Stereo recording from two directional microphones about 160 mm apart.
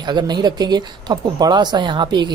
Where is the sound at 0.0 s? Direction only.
25° right (ahead or behind).